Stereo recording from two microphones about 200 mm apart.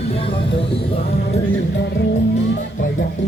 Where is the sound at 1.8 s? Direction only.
60° left (ahead or behind).